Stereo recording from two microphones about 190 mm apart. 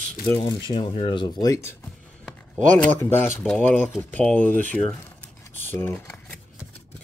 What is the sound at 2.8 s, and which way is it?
Speech, 10° left (ahead or behind).